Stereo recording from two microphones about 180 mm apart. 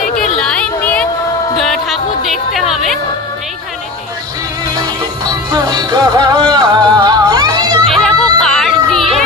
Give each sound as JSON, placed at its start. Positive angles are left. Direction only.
{"t": 0.4, "sound": "a sound", "side_deg": 5}
{"t": 1.6, "sound": "music", "side_deg": 0}
{"t": 5.2, "sound": "music", "side_deg": -20}
{"t": 7.8, "sound": "music", "side_deg": 0}